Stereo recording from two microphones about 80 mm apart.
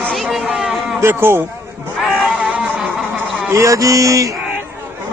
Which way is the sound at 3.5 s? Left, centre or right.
Right.